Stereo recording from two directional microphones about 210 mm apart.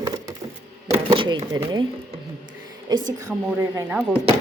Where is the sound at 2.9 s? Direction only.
20° right (ahead or behind).